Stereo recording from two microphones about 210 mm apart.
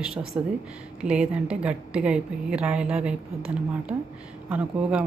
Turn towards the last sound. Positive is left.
turn(degrees=-5)  # may be behind; listen again after turning